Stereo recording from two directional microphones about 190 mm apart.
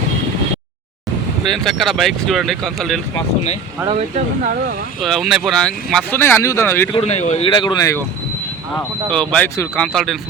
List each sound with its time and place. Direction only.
1.5 s speech: centre (ahead or behind)
3.8 s speech: 35° right (ahead or behind)
5.0 s speech: centre (ahead or behind)
6.9 s speech: 35° left (ahead or behind); by 8.0 s 15° left (ahead or behind)
8.7 s speech: 5° left (ahead or behind)